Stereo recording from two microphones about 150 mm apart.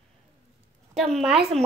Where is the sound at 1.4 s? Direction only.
45° right (ahead or behind).